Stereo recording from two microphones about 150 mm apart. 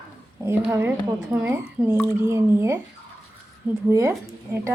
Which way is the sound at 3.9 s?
20° right (ahead or behind).